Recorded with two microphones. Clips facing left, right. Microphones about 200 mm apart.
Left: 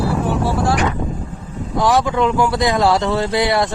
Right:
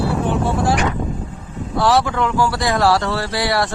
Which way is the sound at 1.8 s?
15° left (ahead or behind).